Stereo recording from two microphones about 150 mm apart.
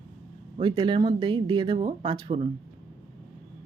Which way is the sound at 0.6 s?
30° right (ahead or behind).